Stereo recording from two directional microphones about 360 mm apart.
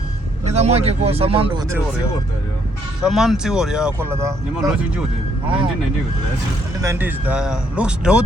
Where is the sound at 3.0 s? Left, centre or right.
Centre.